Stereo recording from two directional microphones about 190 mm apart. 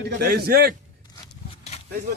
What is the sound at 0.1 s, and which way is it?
Speech, 50° right (ahead or behind).